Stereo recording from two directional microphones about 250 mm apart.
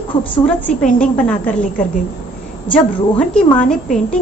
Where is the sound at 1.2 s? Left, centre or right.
Centre.